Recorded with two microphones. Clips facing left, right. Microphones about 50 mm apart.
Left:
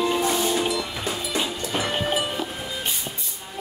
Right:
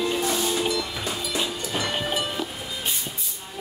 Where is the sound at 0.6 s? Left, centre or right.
Centre.